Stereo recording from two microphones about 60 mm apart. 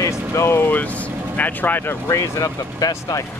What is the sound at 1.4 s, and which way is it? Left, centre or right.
Speech, left.